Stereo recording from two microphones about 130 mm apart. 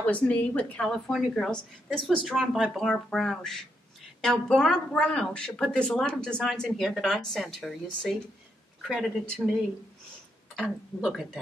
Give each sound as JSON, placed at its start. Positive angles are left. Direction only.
{"t": 0.0, "sound": "a woman's voice", "side_deg": 10}